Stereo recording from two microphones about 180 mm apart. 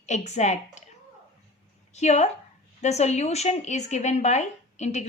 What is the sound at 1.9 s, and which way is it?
Speech, 40° left (ahead or behind).